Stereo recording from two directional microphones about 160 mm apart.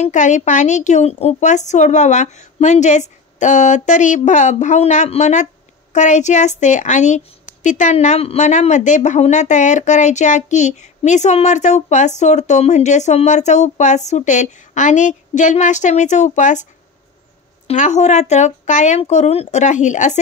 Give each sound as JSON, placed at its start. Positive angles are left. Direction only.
{"t": 0.0, "sound": "a woman's voice", "side_deg": 50}
{"t": 17.6, "sound": "a woman's voice", "side_deg": 45}